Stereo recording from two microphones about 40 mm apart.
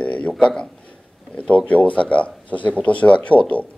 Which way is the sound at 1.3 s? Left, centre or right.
Left.